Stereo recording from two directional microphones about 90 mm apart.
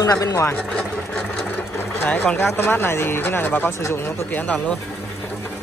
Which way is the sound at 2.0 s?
25° left (ahead or behind).